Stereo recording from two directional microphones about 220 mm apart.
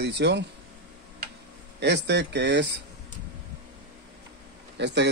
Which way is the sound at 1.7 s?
50° right (ahead or behind).